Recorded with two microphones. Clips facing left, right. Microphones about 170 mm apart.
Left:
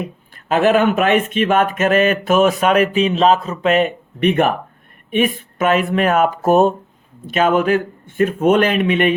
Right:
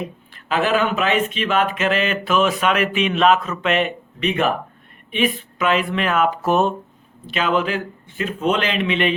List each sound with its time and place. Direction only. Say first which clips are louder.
0.4 s speech: left 5 dB; 50° left (ahead or behind)